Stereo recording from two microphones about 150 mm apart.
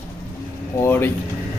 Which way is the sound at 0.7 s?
15° left (ahead or behind).